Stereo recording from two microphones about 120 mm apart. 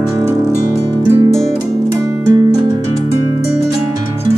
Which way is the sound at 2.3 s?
35° right (ahead or behind).